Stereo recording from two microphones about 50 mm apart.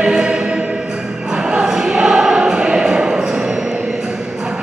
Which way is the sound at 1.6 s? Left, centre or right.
Centre.